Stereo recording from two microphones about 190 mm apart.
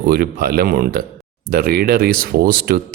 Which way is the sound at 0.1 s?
50° right (ahead or behind).